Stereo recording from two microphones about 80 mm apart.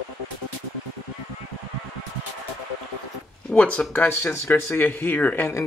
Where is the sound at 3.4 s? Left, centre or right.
Centre.